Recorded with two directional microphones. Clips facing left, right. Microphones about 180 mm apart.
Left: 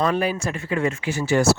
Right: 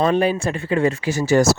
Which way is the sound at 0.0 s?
25° right (ahead or behind).